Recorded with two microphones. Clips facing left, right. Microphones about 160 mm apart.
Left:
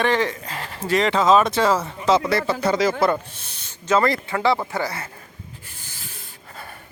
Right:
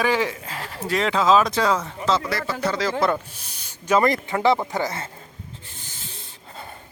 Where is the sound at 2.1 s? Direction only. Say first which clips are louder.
Left 5 dB; 25° left (ahead or behind).